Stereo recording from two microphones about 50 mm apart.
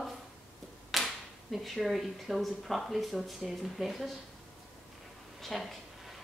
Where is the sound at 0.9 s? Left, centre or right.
Centre.